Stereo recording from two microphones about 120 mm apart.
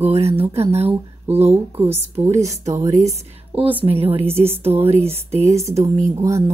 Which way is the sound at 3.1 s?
60° right (ahead or behind).